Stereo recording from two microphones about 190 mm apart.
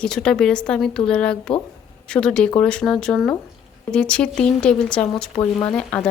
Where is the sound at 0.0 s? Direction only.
5° left (ahead or behind).